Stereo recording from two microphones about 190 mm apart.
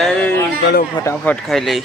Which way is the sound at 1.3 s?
Centre (ahead or behind).